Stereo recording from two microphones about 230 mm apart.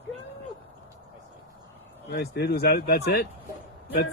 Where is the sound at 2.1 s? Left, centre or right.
Left.